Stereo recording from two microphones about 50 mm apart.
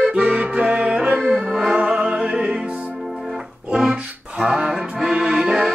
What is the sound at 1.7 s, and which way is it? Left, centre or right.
Music, centre.